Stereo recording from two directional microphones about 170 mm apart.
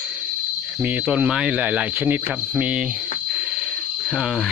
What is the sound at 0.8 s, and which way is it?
Speech, 10° right (ahead or behind).